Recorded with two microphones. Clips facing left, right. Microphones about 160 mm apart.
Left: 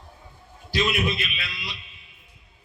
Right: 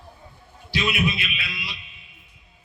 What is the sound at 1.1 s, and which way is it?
Speech, 45° left (ahead or behind).